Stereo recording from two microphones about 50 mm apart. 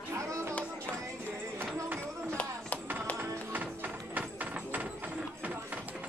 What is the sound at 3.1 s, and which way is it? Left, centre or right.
Music, right.